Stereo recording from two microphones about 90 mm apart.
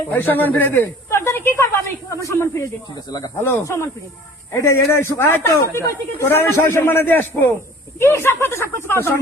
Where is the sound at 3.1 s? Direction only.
50° left (ahead or behind).